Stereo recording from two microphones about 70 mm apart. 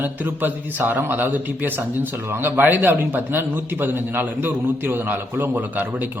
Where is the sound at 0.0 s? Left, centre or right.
Right.